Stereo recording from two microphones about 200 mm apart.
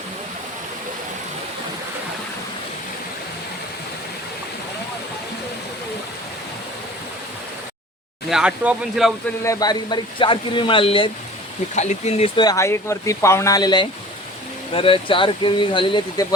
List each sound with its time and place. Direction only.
8.3 s speech: 5° right (ahead or behind)
9.4 s speech: 15° left (ahead or behind)
11.7 s speech: 35° left (ahead or behind)
12.4 s speech: 15° left (ahead or behind)